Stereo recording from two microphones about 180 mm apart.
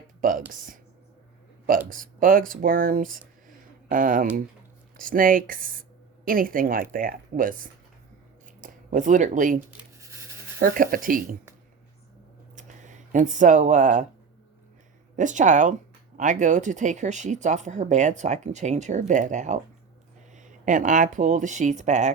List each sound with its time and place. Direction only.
0.2 s speech: 45° right (ahead or behind)
1.9 s speech: 50° right (ahead or behind)
10.6 s speech: 50° right (ahead or behind)
12.5 s a sound: 45° right (ahead or behind)
15.1 s speech: 45° right (ahead or behind)